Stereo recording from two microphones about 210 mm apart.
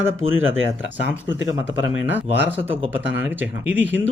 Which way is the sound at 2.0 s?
10° right (ahead or behind).